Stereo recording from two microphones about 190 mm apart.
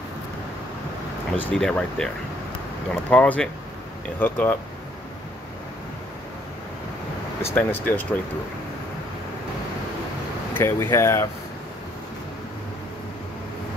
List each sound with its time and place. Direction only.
1.3 s speech: 5° left (ahead or behind)
7.4 s speech: 10° left (ahead or behind)
10.5 s speech: 15° left (ahead or behind)